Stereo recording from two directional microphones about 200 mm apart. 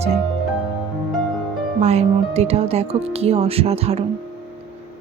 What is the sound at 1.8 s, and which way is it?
Speech, 30° right (ahead or behind).